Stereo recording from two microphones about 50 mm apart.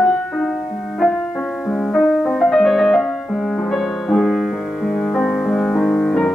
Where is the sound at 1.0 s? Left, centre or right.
Centre.